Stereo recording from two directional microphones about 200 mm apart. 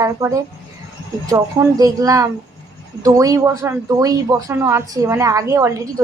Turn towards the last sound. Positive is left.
turn(degrees=-15)  # may be behind; listen again after turning